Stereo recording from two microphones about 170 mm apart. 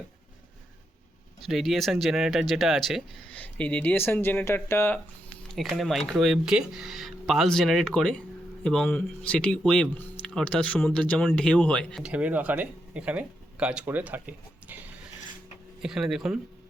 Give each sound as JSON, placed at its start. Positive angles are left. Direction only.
{"t": 1.4, "sound": "speech", "side_deg": 0}
{"t": 5.5, "sound": "speech", "side_deg": 0}
{"t": 12.0, "sound": "speech", "side_deg": -10}
{"t": 15.8, "sound": "speech", "side_deg": -5}